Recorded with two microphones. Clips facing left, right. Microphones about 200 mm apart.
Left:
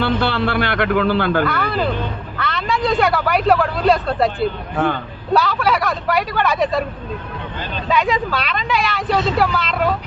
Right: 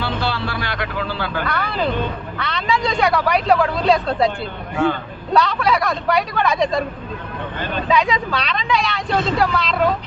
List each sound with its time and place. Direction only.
0.0 s a sound: 55° left (ahead or behind)
1.5 s speech: centre (ahead or behind)
7.6 s speech: 55° right (ahead or behind)
7.9 s speech: centre (ahead or behind)